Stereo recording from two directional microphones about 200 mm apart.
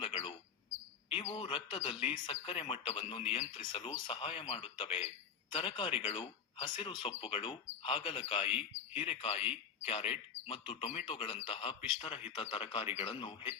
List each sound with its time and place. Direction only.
0.0 s bird: 25° left (ahead or behind)
1.1 s speech: 25° left (ahead or behind)